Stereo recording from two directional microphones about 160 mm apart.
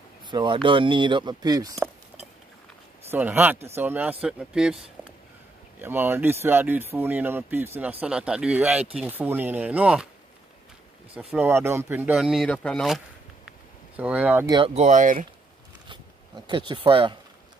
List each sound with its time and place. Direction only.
0.3 s speech: 30° right (ahead or behind)
3.1 s speech: 15° right (ahead or behind)
5.8 s speech: 15° right (ahead or behind)
11.3 s speech: 15° right (ahead or behind)
13.5 s a sound: 10° right (ahead or behind)
14.7 s speech: 45° right (ahead or behind)
16.4 s speech: 30° right (ahead or behind)